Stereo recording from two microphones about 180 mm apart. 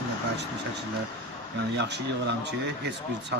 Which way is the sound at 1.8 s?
70° right (ahead or behind).